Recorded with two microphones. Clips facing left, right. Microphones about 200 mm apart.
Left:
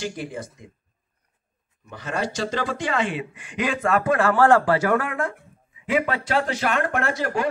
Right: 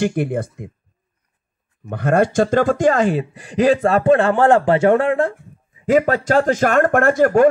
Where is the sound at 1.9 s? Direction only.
55° right (ahead or behind); by 5.3 s 30° right (ahead or behind).